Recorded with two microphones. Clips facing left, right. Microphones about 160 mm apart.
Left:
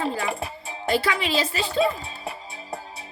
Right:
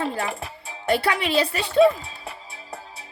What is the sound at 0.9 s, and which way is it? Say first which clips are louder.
Speech: right 1 dB; 60° right (ahead or behind).